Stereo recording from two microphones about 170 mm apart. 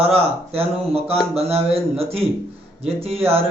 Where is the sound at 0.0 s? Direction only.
35° right (ahead or behind).